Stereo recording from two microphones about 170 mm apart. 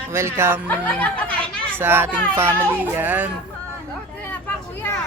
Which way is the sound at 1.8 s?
15° right (ahead or behind).